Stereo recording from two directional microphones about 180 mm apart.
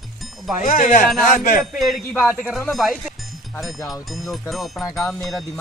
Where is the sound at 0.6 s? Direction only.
45° left (ahead or behind).